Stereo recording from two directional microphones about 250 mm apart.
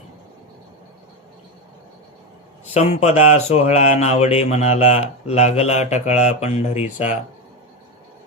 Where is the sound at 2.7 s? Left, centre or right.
Left.